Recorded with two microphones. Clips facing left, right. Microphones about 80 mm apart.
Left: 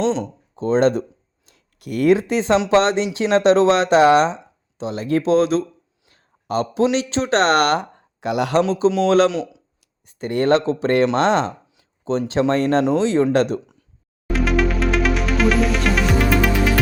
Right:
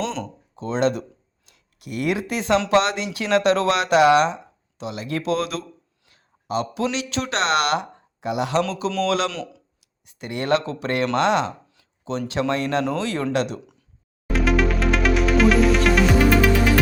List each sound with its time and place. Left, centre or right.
0.0 s speech: left
0.5 s speech: left
1.5 s a sound: left
2.1 s speech: left
6.1 s a sound: left
6.9 s speech: left
8.2 s speech: left
9.0 s speech: left
9.3 s speech: centre
10.1 s speech: left
12.8 s speech: left
13.3 s speech: left
14.3 s music: centre